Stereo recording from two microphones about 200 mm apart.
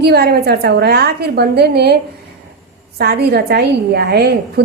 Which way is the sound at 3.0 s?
50° right (ahead or behind).